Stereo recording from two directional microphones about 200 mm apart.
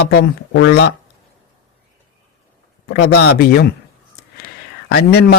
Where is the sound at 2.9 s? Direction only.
55° left (ahead or behind).